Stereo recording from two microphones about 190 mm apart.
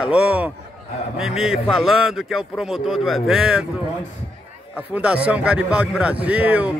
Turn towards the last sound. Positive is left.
turn(degrees=-5)  # may be behind; listen again after turning